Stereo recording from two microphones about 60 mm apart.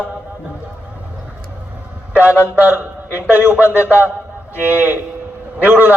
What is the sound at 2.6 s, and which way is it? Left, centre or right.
A man's voice, right.